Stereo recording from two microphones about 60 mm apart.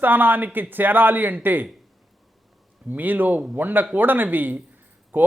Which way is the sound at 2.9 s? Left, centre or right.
Right.